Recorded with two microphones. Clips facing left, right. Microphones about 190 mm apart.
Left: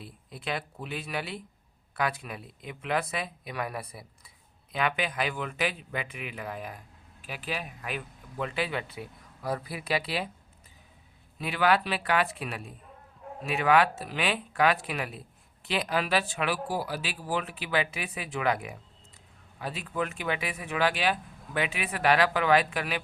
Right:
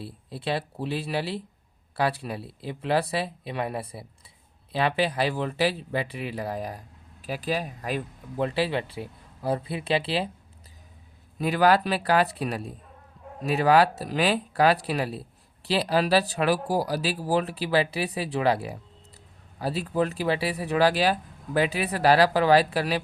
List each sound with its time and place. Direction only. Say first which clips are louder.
0.0 s speech: right 6 dB; 30° right (ahead or behind)
11.3 s speech: right 5 dB; 40° right (ahead or behind)